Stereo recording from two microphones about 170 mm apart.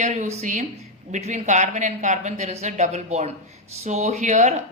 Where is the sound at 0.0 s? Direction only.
45° right (ahead or behind).